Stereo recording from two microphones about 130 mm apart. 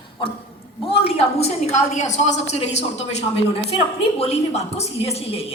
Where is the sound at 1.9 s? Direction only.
65° left (ahead or behind).